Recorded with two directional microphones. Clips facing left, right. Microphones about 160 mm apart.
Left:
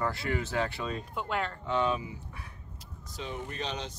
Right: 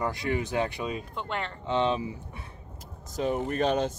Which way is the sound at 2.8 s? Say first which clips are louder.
Right 11 dB; 45° right (ahead or behind).